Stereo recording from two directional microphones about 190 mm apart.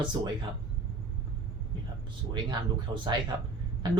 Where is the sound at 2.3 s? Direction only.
25° right (ahead or behind).